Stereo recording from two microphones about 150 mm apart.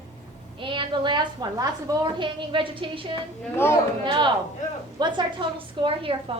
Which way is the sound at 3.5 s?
15° left (ahead or behind).